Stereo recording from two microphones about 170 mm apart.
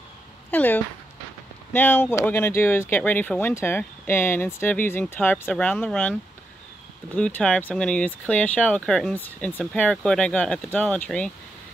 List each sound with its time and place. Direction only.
0.5 s speech: 10° left (ahead or behind)
7.2 s speech: 5° left (ahead or behind)